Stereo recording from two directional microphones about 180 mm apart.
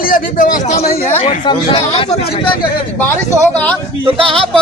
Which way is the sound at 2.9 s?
10° left (ahead or behind).